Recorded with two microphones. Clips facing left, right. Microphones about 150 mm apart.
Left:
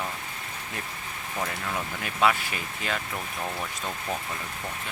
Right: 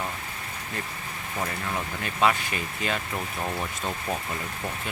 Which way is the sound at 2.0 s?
Centre (ahead or behind).